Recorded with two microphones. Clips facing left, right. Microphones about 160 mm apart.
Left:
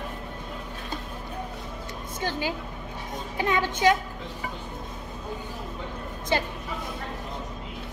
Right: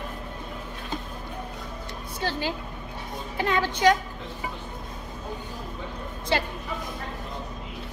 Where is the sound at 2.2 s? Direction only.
15° left (ahead or behind).